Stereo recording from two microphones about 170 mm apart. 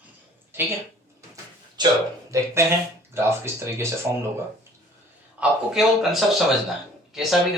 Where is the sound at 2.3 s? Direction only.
15° right (ahead or behind).